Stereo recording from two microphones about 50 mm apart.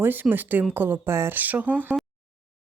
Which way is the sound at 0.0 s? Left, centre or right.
Right.